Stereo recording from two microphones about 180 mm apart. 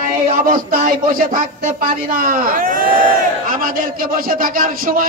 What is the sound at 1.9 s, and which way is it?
Speech, 50° right (ahead or behind).